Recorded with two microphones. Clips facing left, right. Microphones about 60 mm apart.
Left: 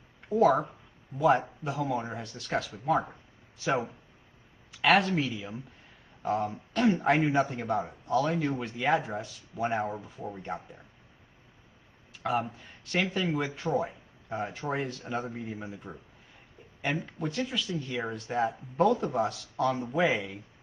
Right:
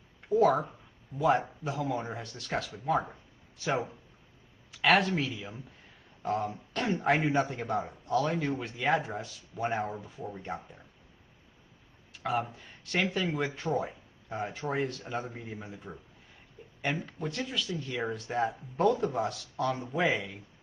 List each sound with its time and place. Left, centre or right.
0.3 s a man's voice: centre
12.1 s a man's voice: centre
16.6 s a sound: centre
17.2 s a man's voice: centre